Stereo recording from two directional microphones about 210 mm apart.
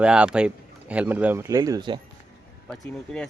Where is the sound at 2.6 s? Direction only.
5° left (ahead or behind).